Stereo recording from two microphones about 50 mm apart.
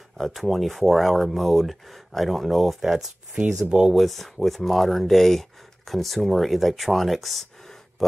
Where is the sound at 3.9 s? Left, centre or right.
Centre.